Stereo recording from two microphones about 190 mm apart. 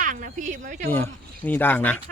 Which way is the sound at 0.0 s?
45° right (ahead or behind).